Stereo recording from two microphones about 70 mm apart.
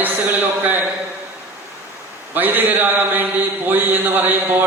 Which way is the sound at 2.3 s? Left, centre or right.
Right.